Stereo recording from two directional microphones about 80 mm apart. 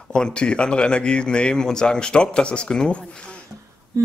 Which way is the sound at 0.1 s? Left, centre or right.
Centre.